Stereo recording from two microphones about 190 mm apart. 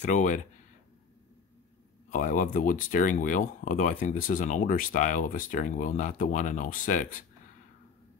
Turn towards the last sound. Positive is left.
turn(degrees=45)  # may be behind; listen again after turning